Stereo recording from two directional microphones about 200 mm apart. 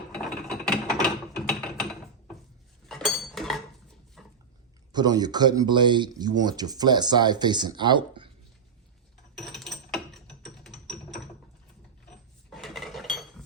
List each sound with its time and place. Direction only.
0.1 s mechanisms: 5° left (ahead or behind)
2.9 s dishes: centre (ahead or behind)
4.2 s dog: centre (ahead or behind)
4.9 s speech: 20° right (ahead or behind)
9.4 s mechanisms: centre (ahead or behind)
12.5 s cutlery: centre (ahead or behind)